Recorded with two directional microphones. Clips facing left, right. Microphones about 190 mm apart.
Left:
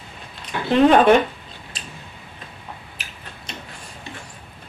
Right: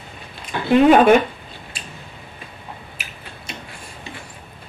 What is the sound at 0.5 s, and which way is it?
Speech, 10° right (ahead or behind).